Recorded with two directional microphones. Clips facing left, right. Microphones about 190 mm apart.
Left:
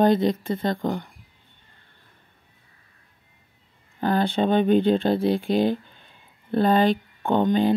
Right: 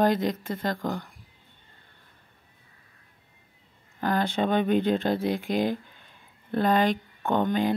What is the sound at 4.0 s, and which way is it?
Speech, 30° left (ahead or behind).